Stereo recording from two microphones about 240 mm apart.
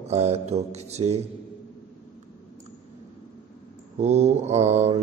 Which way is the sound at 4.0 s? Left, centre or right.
Right.